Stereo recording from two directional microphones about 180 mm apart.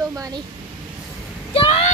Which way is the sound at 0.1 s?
20° right (ahead or behind).